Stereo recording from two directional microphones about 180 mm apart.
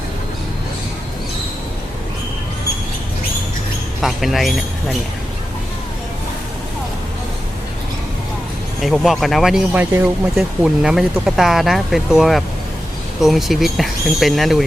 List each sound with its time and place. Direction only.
4.0 s speech: centre (ahead or behind)
8.8 s speech: centre (ahead or behind)